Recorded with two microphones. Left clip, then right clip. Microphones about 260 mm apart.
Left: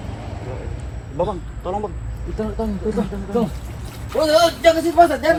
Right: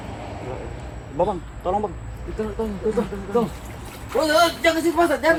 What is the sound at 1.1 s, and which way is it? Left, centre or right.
Speech, right.